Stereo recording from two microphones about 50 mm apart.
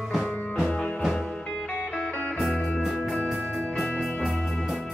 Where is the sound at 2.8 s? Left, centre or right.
Centre.